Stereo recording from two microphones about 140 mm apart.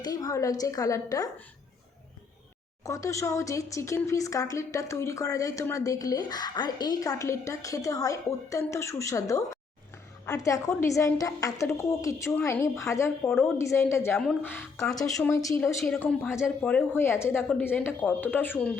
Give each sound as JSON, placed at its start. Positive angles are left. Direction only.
{"t": 0.0, "sound": "speech", "side_deg": 25}
{"t": 2.8, "sound": "speech", "side_deg": 25}
{"t": 15.6, "sound": "speech", "side_deg": 0}
{"t": 16.6, "sound": "speech", "side_deg": 10}